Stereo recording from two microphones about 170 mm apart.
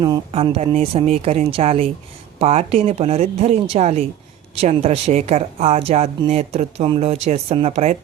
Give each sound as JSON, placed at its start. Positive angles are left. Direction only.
{"t": 0.0, "sound": "speech", "side_deg": -30}